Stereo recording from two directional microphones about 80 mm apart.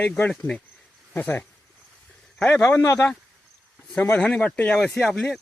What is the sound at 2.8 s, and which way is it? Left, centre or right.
Speech, left.